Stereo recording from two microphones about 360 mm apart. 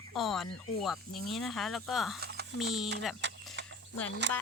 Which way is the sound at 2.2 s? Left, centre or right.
Right.